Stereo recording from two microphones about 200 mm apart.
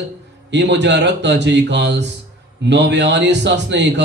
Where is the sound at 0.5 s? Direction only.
60° right (ahead or behind).